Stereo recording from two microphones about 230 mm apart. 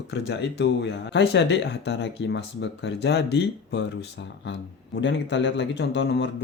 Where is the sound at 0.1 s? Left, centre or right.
Left.